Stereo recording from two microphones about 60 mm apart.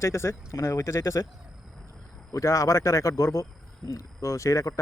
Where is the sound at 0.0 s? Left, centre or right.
Left.